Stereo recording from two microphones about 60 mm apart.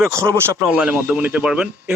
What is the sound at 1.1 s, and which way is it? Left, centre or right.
Speech, right.